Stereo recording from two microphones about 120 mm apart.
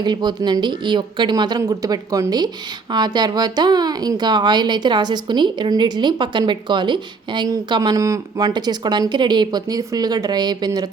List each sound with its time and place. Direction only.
0.0 s speech: 35° right (ahead or behind)